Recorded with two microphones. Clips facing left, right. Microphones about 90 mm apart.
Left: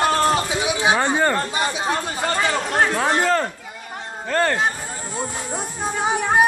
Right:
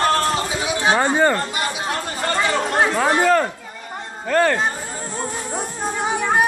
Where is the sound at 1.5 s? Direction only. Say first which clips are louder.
Left 2 dB; 30° left (ahead or behind).